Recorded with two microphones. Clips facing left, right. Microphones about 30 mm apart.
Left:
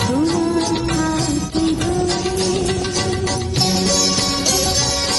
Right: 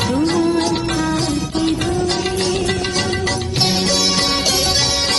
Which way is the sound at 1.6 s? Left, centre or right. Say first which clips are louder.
Even; right.